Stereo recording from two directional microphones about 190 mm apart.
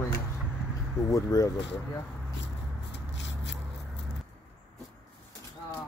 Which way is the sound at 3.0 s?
70° left (ahead or behind).